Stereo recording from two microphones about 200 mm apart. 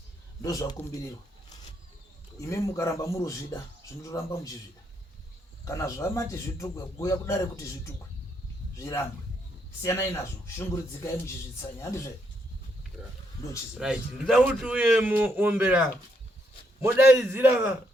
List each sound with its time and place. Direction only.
0.4 s a man's voice: 15° left (ahead or behind)
2.4 s a man's voice: 15° left (ahead or behind)
5.6 s a man's voice: 15° left (ahead or behind)
13.7 s a man's voice: 5° right (ahead or behind)